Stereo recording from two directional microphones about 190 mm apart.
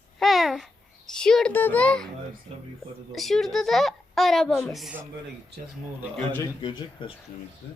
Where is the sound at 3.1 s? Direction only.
Centre (ahead or behind).